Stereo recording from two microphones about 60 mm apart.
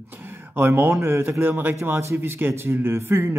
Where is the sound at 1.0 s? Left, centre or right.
Right.